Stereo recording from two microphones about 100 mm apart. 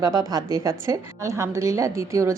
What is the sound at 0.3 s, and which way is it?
A woman's voice, 40° right (ahead or behind).